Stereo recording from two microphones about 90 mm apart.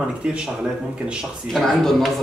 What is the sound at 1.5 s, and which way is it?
Speech, centre (ahead or behind).